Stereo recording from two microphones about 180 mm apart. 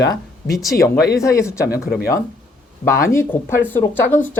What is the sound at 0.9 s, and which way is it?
Speech, 60° left (ahead or behind).